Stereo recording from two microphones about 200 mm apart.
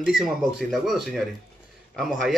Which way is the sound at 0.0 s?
Centre (ahead or behind).